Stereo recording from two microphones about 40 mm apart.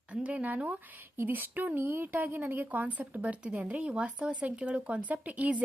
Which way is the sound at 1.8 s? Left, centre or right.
Right.